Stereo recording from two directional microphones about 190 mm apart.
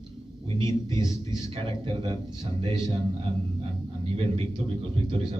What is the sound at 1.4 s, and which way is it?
Speech, 30° right (ahead or behind).